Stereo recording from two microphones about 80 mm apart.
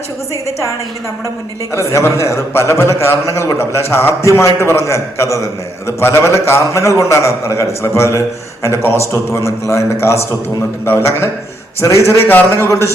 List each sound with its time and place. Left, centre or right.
1.7 s a man's voice: left
8.9 s speech: right
9.6 s a man's voice: left
12.3 s a man's voice: left